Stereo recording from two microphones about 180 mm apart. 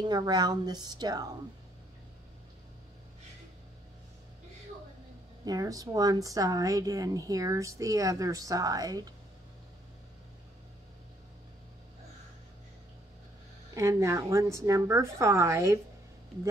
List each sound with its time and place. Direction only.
0.0 s speech: 20° right (ahead or behind)
5.4 s speech: 20° right (ahead or behind)
13.7 s a woman's voice: 15° right (ahead or behind)